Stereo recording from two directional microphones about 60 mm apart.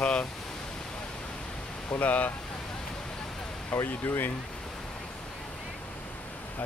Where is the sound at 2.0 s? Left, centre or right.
Left.